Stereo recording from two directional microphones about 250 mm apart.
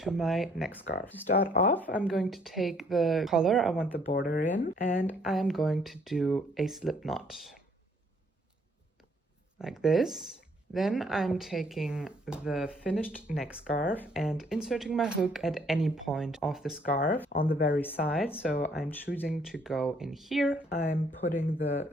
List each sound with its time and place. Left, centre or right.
0.0 s speech: centre
1.3 s speech: left
1.9 s speech: centre
4.1 s speech: left
4.9 s speech: centre
9.6 s speech: centre
16.8 s speech: left
17.7 s speech: centre
20.7 s speech: left